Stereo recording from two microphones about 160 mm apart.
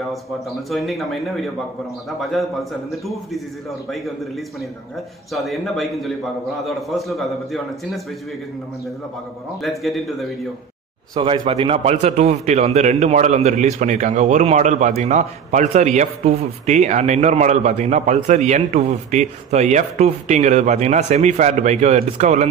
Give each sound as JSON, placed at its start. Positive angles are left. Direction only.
{"t": 0.7, "sound": "a man's voice", "side_deg": 0}
{"t": 5.3, "sound": "a man's voice", "side_deg": 0}
{"t": 9.6, "sound": "a man's voice", "side_deg": 0}
{"t": 11.1, "sound": "a man's voice", "side_deg": -30}